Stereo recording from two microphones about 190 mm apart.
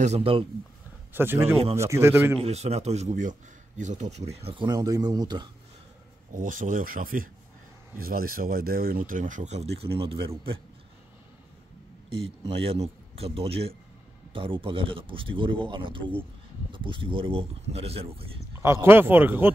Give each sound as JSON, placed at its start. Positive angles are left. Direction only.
{"t": 0.0, "sound": "speech", "side_deg": -30}
{"t": 1.1, "sound": "speech", "side_deg": -10}
{"t": 2.4, "sound": "speech", "side_deg": -35}
{"t": 4.5, "sound": "speech", "side_deg": -25}
{"t": 6.3, "sound": "speech", "side_deg": -45}
{"t": 12.2, "sound": "speech", "side_deg": -30}
{"t": 18.6, "sound": "speech", "side_deg": -15}